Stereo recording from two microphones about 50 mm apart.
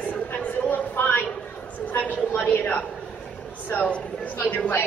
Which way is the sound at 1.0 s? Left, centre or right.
Left.